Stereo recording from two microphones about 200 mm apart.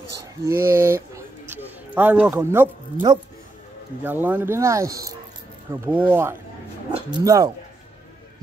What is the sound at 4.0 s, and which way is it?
Speech, 10° right (ahead or behind).